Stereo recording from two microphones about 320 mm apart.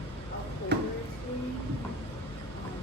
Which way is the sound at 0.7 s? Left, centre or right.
Right.